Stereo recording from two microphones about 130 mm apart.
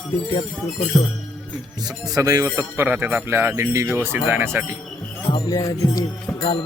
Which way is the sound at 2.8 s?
15° right (ahead or behind).